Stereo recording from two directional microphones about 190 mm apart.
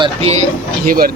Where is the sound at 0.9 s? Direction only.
50° right (ahead or behind).